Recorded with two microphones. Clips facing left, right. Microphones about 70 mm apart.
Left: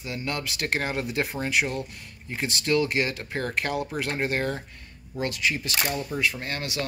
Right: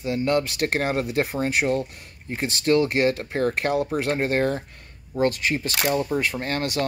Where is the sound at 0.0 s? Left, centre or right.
Right.